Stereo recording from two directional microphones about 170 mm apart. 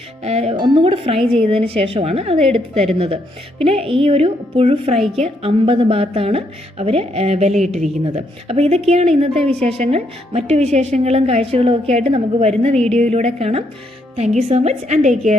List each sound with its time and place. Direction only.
0.2 s a woman's voice: 40° right (ahead or behind)
4.9 s a woman's voice: centre (ahead or behind)
5.2 s a woman's voice: 35° right (ahead or behind)